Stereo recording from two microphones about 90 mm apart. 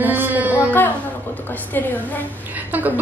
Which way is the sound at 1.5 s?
20° left (ahead or behind).